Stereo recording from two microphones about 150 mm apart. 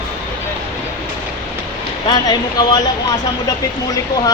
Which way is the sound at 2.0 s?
25° left (ahead or behind).